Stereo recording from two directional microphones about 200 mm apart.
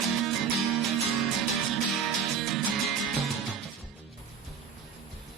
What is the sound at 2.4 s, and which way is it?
Music, centre (ahead or behind).